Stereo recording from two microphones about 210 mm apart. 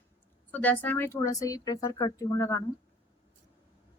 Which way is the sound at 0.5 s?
10° left (ahead or behind).